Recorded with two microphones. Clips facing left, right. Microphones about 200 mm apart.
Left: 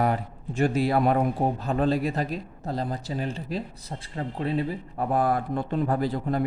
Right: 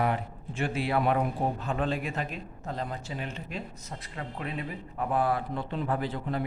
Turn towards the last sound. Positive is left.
turn(degrees=40)  # may be behind; listen again after turning